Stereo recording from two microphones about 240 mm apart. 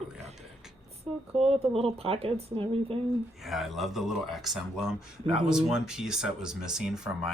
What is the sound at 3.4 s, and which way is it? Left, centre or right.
Speech, centre.